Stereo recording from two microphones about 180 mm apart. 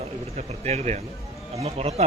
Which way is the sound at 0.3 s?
40° right (ahead or behind).